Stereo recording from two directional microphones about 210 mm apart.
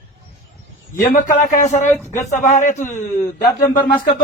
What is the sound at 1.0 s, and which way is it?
Speech, 40° left (ahead or behind).